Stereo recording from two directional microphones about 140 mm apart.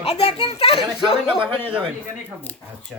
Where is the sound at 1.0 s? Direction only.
5° right (ahead or behind).